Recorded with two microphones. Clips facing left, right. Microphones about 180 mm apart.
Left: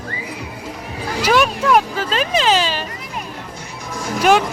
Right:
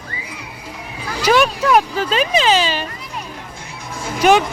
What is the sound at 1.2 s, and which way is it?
Speech, 5° left (ahead or behind).